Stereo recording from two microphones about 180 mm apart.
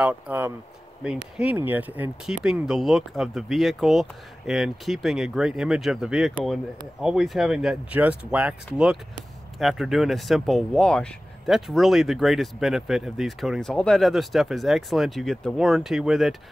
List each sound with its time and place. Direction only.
0.0 s speech: 10° right (ahead or behind)